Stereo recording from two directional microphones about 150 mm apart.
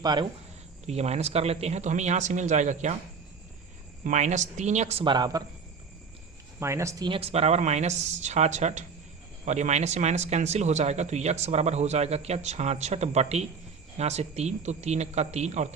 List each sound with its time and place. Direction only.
0.0 s speech: 30° right (ahead or behind)
0.9 s speech: 45° right (ahead or behind)
4.0 s speech: 50° right (ahead or behind)
5.0 s speech: 30° right (ahead or behind)
6.6 s speech: 20° right (ahead or behind)
7.1 s speech: 40° right (ahead or behind)